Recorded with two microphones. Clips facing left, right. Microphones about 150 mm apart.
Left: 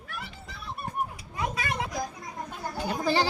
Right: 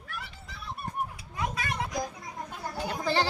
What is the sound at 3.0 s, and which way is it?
Speech, 10° left (ahead or behind).